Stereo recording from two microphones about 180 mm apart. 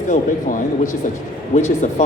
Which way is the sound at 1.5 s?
40° left (ahead or behind).